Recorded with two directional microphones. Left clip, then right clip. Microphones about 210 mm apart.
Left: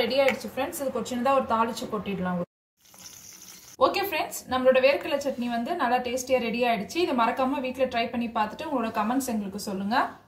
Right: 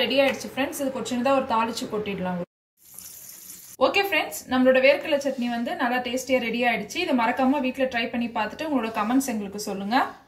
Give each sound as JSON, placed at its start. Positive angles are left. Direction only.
{"t": 0.1, "sound": "a woman's voice", "side_deg": 25}
{"t": 3.7, "sound": "a woman's voice", "side_deg": 25}